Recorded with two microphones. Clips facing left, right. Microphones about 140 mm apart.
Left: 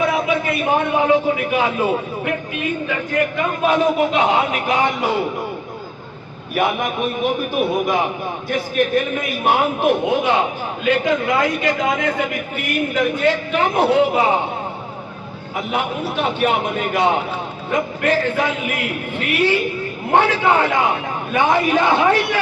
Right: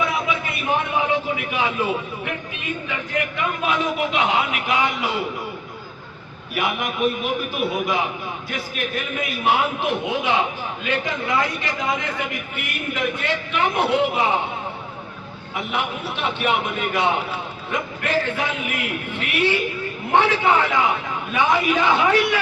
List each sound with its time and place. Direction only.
0.6 s a man's voice: 45° left (ahead or behind)
3.3 s a man's voice: 40° left (ahead or behind)
6.5 s a man's voice: 50° left (ahead or behind)
15.5 s a man's voice: 40° left (ahead or behind)